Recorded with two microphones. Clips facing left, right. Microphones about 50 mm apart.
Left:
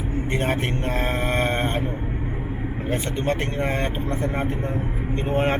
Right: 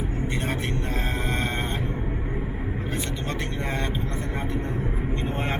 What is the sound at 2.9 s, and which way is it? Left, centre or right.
Speech, left.